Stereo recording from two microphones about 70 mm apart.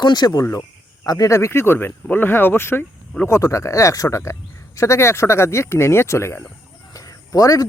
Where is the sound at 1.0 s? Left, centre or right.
Left.